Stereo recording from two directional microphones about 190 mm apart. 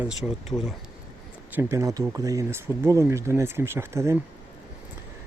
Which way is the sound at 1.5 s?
15° right (ahead or behind).